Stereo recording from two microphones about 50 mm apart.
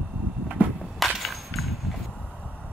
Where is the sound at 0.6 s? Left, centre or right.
Right.